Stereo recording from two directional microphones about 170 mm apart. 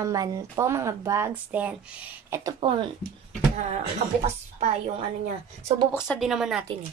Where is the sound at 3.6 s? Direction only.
45° right (ahead or behind).